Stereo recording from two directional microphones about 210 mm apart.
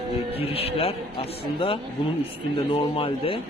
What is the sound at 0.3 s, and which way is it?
Speech, 30° left (ahead or behind).